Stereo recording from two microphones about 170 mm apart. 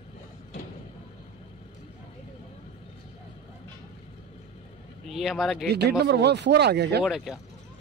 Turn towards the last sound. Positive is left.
turn(degrees=0)  # may be behind; listen again after turning